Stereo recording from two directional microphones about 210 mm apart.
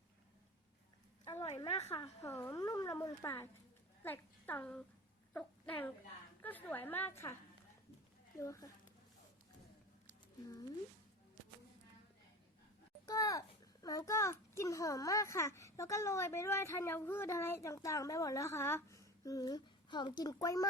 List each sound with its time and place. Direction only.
1.2 s a sound: 15° left (ahead or behind)
1.5 s a woman's voice: 30° left (ahead or behind)
2.2 s a child's voice: 15° left (ahead or behind)
8.4 s a child's voice: 15° left (ahead or behind)
13.1 s a child's voice: 15° left (ahead or behind)